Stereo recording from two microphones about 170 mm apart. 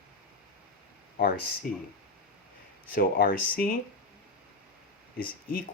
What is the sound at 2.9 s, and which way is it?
Speech, 60° left (ahead or behind).